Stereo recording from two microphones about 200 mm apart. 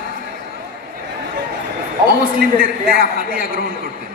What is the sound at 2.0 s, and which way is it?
A man's voice, 50° right (ahead or behind).